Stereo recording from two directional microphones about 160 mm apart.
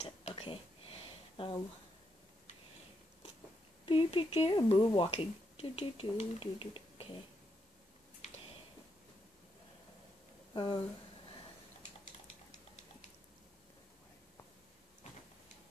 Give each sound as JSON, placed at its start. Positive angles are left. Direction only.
{"t": 0.0, "sound": "a sound", "side_deg": 40}
{"t": 3.8, "sound": "speech", "side_deg": 35}
{"t": 10.5, "sound": "speech", "side_deg": 30}